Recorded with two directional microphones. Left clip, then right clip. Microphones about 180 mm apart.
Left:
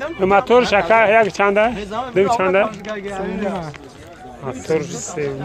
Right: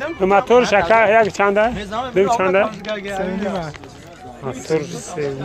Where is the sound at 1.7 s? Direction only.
50° right (ahead or behind).